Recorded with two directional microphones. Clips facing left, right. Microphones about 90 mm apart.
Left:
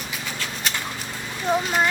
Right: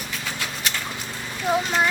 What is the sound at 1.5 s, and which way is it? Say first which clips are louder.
Speech: even; 5° right (ahead or behind).